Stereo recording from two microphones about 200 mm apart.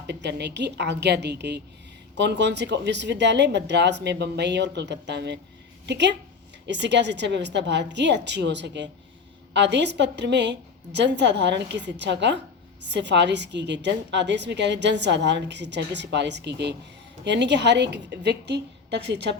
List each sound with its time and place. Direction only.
0.1 s a woman's voice: 60° right (ahead or behind)